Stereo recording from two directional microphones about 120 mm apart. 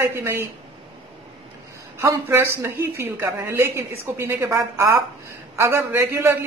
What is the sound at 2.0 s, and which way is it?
A man's voice, 20° right (ahead or behind).